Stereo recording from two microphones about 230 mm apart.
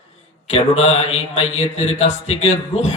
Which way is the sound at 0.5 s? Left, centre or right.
Left.